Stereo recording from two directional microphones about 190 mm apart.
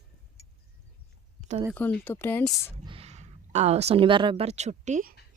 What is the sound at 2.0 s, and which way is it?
Speech, 10° left (ahead or behind).